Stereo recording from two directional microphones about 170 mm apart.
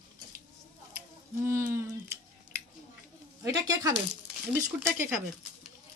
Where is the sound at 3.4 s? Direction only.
20° right (ahead or behind).